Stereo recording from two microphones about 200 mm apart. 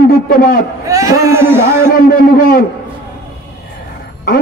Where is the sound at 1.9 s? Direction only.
45° left (ahead or behind).